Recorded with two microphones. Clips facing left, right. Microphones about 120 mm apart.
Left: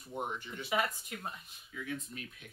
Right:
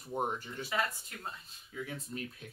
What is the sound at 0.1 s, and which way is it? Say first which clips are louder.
Speech: right 4 dB; 40° right (ahead or behind).